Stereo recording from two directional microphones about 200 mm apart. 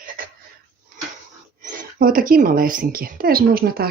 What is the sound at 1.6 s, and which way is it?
A woman's voice, 40° right (ahead or behind).